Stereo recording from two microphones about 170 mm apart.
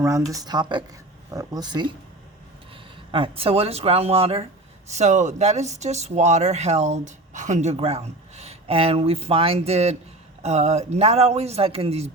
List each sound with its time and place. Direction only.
0.0 s speech: 20° right (ahead or behind)
3.1 s speech: 30° right (ahead or behind)